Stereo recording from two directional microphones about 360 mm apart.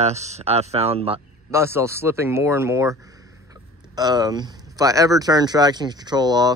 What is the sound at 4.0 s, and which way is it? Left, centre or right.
Speech, centre.